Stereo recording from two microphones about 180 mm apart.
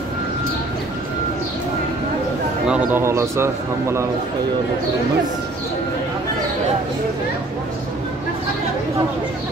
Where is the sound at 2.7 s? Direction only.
10° right (ahead or behind).